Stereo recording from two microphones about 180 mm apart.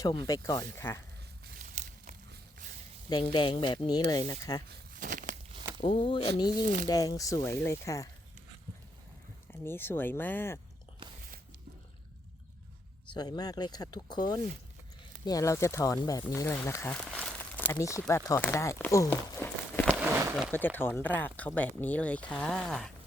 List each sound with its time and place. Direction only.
0.0 s speech: 20° left (ahead or behind)
1.5 s crumpling: 45° right (ahead or behind)
2.3 s a sound: 50° right (ahead or behind)
3.3 s speech: 25° left (ahead or behind)
4.9 s a sound: 45° right (ahead or behind)
5.8 s speech: 30° left (ahead or behind)
9.5 s speech: 10° left (ahead or behind)
13.1 s speech: 20° left (ahead or behind)
20.0 s a sound: 15° right (ahead or behind)
20.5 s speech: 10° left (ahead or behind)